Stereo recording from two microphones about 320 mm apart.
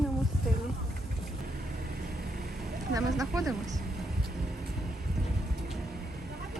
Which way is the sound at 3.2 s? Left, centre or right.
Centre.